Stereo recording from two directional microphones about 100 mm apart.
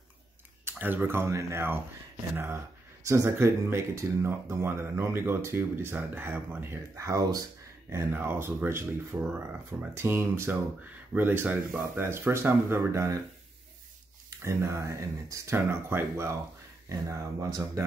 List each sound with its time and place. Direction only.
0.7 s speech: 20° right (ahead or behind); by 7.4 s 40° right (ahead or behind)
7.9 s speech: 20° right (ahead or behind)
14.3 s speech: 30° right (ahead or behind)